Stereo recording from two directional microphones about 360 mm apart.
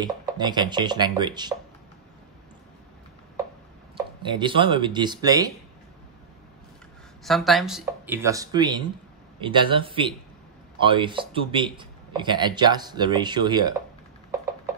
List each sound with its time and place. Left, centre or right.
0.0 s speech: centre
3.9 s speech: centre
7.2 s speech: centre